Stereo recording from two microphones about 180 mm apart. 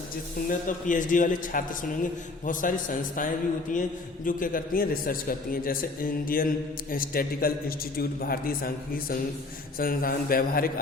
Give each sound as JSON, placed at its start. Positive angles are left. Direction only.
{"t": 0.4, "sound": "a man's voice", "side_deg": 45}